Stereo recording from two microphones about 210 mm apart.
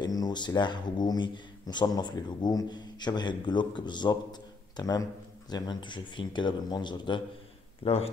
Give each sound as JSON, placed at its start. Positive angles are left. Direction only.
{"t": 0.0, "sound": "speech", "side_deg": 20}